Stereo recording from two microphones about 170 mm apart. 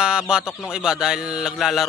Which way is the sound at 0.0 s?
5° right (ahead or behind).